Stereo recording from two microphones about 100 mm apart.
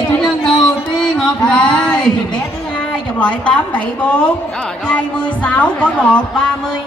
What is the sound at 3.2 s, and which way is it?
Music, 10° left (ahead or behind).